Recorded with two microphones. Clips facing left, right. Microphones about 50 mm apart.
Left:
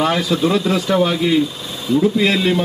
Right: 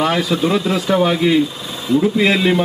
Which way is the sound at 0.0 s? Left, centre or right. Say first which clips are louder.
Even; centre.